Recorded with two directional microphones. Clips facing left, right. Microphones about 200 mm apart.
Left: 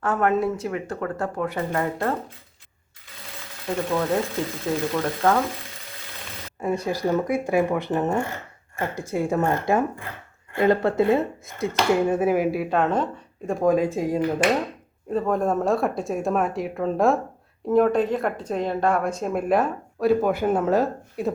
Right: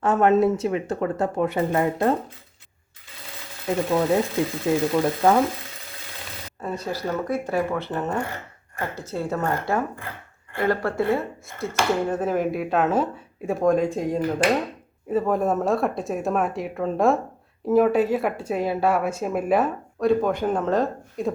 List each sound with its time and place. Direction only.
0.0 s speech: 25° right (ahead or behind)
3.8 s speech: 15° right (ahead or behind)
6.6 s speech: 15° left (ahead or behind)